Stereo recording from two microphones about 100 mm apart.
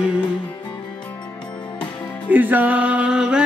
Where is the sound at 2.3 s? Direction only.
15° right (ahead or behind).